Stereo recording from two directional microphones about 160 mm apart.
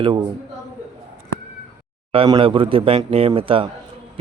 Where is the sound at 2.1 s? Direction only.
35° right (ahead or behind).